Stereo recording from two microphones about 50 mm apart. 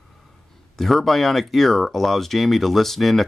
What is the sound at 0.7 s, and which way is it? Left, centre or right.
Speech, centre.